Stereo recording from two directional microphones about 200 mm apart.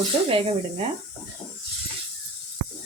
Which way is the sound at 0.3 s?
30° right (ahead or behind).